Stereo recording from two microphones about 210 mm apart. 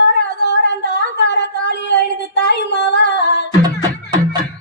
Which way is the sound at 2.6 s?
55° left (ahead or behind).